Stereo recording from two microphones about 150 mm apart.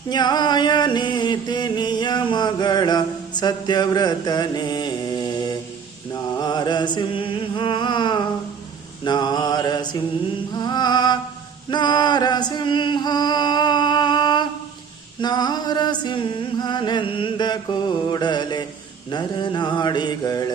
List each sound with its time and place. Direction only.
0.1 s mantra: 30° left (ahead or behind)
6.4 s chant: 30° left (ahead or behind)
9.0 s mantra: 30° left (ahead or behind)
11.7 s music: 30° left (ahead or behind)
15.2 s a sound: 30° left (ahead or behind)
19.1 s mantra: 30° left (ahead or behind)